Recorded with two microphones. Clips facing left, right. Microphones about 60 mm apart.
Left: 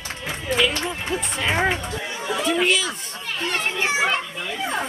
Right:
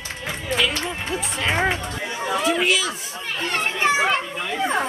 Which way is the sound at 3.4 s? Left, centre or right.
Right.